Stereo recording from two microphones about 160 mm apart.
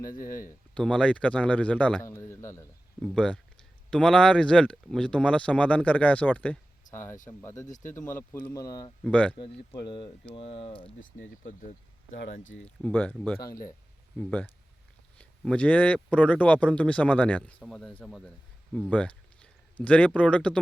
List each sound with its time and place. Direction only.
0.1 s speech: 60° left (ahead or behind)
0.7 s speech: 5° left (ahead or behind)
3.0 s speech: 5° left (ahead or behind)
7.7 s speech: 50° left (ahead or behind)
8.0 s speech: 10° left (ahead or behind)
8.5 s speech: 25° left (ahead or behind)
9.0 s speech: 10° left (ahead or behind)
9.3 s speech: 30° left (ahead or behind)
12.6 s speech: 10° left (ahead or behind)
14.2 s speech: 10° left (ahead or behind)
18.7 s a sound: 5° left (ahead or behind)
19.8 s speech: 10° left (ahead or behind)